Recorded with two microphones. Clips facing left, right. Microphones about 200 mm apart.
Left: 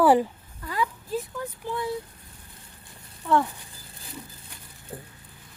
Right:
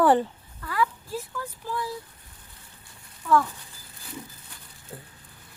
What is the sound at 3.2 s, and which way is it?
Speech, 25° left (ahead or behind).